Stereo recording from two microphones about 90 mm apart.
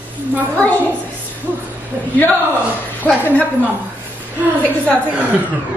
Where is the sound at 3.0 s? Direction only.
15° left (ahead or behind).